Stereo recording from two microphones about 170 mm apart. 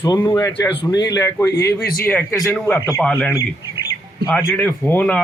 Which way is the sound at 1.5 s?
75° left (ahead or behind).